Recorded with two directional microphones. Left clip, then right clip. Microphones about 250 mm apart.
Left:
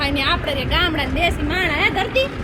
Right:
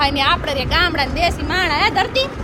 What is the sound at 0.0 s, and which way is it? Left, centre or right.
A woman's voice, centre.